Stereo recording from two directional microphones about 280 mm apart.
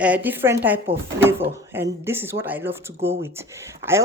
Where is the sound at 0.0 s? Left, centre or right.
Centre.